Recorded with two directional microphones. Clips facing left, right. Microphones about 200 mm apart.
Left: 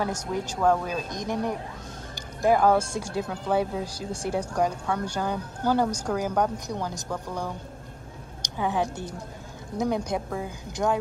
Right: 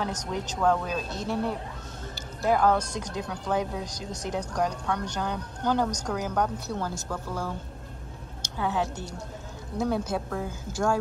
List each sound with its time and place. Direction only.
0.0 s a woman's voice: 10° left (ahead or behind)
2.1 s music: 10° left (ahead or behind)
2.9 s a woman's voice: 10° left (ahead or behind)